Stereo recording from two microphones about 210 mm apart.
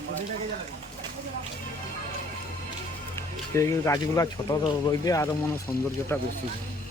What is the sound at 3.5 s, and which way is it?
Speech, 15° left (ahead or behind).